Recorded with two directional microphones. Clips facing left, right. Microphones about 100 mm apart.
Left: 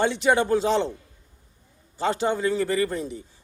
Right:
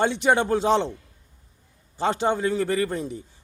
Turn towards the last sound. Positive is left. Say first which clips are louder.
# even
turn(degrees=-25)  # may be behind; listen again after turning